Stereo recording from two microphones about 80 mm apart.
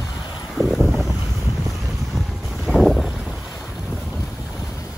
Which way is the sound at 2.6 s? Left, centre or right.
Centre.